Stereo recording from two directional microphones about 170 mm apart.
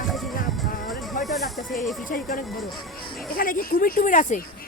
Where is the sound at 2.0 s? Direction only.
55° left (ahead or behind).